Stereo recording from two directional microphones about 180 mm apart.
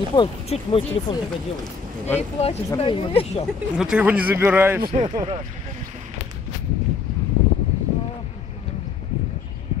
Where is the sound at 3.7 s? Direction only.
5° right (ahead or behind).